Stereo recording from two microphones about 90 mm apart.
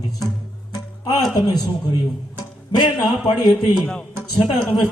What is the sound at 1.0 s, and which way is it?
Speech, 45° left (ahead or behind).